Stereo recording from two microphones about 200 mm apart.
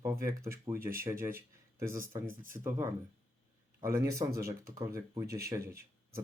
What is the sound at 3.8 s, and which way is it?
Speech, 15° right (ahead or behind).